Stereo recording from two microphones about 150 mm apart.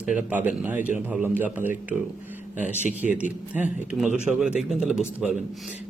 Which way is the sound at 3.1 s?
55° left (ahead or behind).